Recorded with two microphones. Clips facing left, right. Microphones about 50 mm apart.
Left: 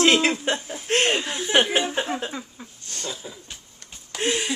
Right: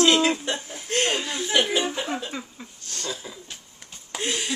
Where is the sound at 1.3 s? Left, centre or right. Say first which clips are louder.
Left 2 dB; left.